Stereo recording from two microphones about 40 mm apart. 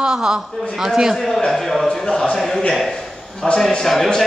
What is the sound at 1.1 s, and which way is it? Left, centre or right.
Speech, centre.